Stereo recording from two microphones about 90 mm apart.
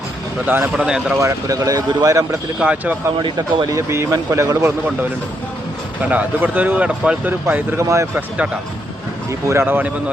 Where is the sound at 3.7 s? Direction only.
35° right (ahead or behind).